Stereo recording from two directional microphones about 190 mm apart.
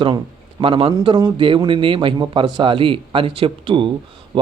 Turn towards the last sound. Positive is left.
turn(degrees=-25)  # may be behind; listen again after turning